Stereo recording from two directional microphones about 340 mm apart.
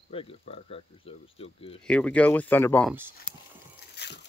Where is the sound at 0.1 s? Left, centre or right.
Centre.